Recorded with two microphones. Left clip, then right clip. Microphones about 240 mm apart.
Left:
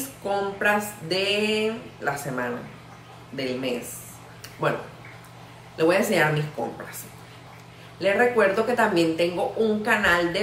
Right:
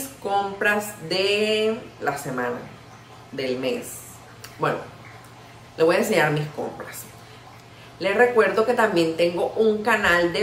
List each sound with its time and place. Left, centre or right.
0.3 s a woman's voice: centre
8.0 s a woman's voice: centre